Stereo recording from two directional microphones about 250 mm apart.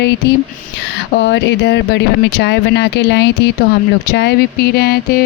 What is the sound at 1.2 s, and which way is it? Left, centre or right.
Speech, left.